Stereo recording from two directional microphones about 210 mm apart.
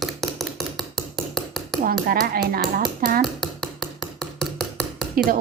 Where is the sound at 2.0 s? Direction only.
45° right (ahead or behind).